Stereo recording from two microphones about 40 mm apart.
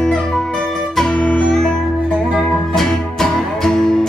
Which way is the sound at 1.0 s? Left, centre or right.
Left.